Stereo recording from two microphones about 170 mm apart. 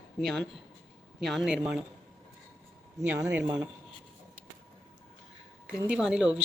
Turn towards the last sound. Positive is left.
turn(degrees=-5)  # may be behind; listen again after turning